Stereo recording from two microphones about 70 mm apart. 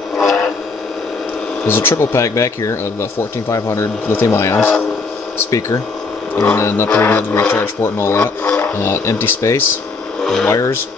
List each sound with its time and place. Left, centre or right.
0.2 s a sound: centre
1.7 s speech: left
6.4 s speech: left
6.9 s speech: centre
7.2 s speech: left
10.2 s speech: centre
10.5 s speech: left